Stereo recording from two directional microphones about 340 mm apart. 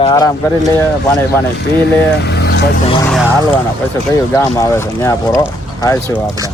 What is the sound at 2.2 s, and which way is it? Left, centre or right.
Vehicle, left.